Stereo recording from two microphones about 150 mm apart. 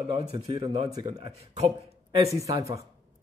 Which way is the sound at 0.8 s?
25° right (ahead or behind).